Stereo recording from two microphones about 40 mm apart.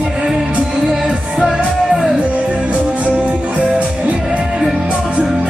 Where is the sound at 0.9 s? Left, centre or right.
Centre.